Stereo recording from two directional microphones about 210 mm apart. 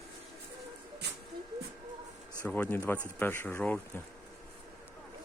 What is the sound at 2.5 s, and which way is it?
Speech, 5° left (ahead or behind).